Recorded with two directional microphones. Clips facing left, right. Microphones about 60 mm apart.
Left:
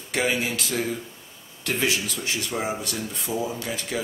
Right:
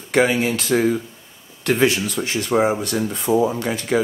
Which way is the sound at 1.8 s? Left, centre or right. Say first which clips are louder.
Right 6 dB; right.